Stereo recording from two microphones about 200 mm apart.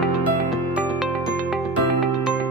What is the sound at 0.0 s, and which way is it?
Music, centre (ahead or behind).